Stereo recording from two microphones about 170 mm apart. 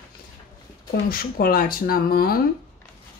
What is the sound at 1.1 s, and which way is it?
Speech, 60° left (ahead or behind).